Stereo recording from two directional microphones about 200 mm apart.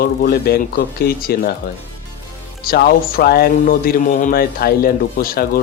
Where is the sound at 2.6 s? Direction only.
50° left (ahead or behind).